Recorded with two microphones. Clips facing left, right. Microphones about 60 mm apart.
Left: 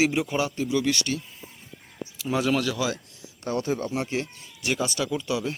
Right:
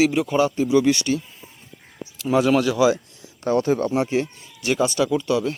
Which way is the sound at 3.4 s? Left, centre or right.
Right.